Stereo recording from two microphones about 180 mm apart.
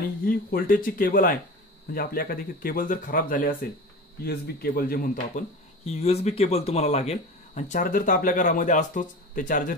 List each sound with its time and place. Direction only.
0.2 s speech: 55° left (ahead or behind)
5.9 s speech: 35° left (ahead or behind)